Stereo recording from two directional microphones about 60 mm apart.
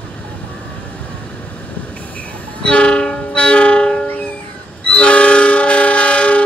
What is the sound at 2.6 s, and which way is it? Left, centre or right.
Train, centre.